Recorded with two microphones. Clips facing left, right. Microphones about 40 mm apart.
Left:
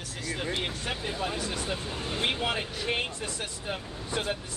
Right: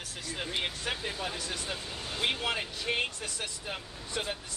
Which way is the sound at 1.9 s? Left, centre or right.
Left.